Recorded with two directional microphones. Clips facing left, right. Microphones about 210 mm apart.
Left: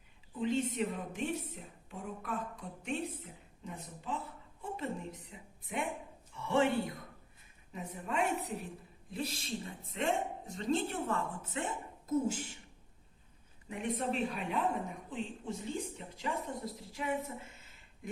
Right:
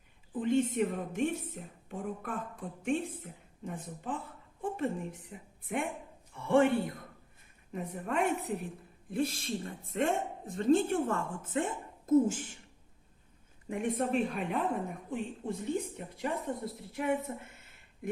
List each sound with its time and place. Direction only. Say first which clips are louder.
0.3 s a woman's voice: right 4 dB; 50° right (ahead or behind)
5.3 s a woman's voice: right 7 dB; 55° right (ahead or behind)
13.7 s a woman's voice: right 4 dB; 50° right (ahead or behind)
17.2 s a sound: right 4 dB; 55° right (ahead or behind)